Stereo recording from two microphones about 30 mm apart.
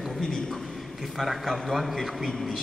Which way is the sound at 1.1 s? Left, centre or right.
Centre.